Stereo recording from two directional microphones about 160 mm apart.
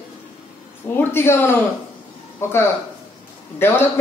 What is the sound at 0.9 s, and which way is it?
A man's voice, 15° left (ahead or behind).